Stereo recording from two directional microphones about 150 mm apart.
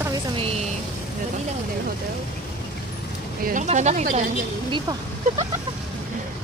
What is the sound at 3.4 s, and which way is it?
Speech, 60° right (ahead or behind).